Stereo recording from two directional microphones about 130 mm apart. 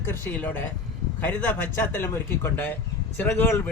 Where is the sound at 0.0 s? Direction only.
15° left (ahead or behind).